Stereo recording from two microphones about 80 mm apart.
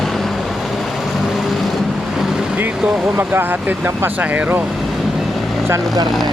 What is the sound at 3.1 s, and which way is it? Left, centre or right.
Speech, right.